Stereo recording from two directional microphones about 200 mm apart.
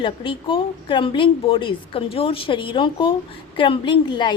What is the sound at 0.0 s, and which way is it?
A woman's voice, 25° left (ahead or behind).